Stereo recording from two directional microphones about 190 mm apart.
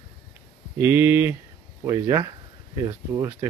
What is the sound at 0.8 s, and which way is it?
Speech, 10° right (ahead or behind).